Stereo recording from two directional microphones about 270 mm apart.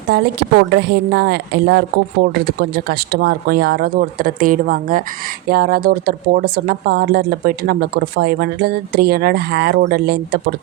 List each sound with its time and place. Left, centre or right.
0.1 s speech: right